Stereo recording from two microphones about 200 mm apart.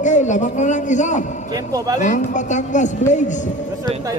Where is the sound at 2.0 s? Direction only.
35° left (ahead or behind).